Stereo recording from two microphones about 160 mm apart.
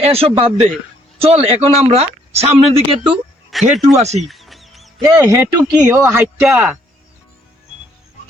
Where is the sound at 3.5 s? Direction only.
Centre (ahead or behind).